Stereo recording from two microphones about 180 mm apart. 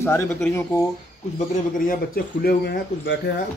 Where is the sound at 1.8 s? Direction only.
60° left (ahead or behind).